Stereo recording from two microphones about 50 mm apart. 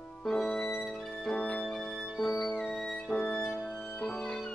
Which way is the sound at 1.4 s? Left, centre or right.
Left.